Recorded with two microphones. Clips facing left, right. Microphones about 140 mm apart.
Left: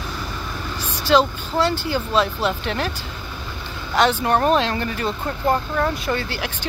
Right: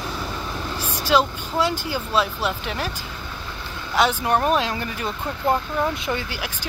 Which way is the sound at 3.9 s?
5° right (ahead or behind).